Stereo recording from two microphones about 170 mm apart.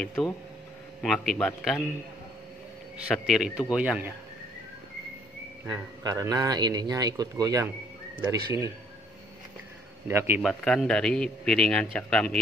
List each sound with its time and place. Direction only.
0.0 s a man's voice: centre (ahead or behind)
3.3 s a man's voice: centre (ahead or behind)
5.7 s speech: 20° right (ahead or behind)
10.0 s a man's voice: 15° right (ahead or behind)
10.4 s a man's voice: 5° left (ahead or behind)